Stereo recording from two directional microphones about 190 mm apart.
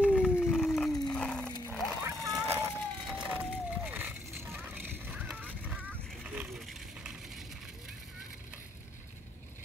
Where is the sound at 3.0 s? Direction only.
5° right (ahead or behind).